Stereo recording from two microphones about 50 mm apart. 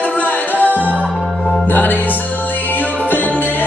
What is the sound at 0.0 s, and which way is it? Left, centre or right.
Music, left.